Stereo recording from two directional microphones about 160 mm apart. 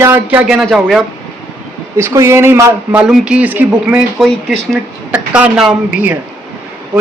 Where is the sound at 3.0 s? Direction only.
5° right (ahead or behind).